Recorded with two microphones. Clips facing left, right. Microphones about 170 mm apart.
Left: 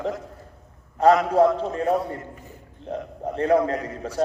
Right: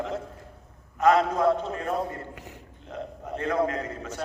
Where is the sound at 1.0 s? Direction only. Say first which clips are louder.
Left 4 dB; 30° left (ahead or behind).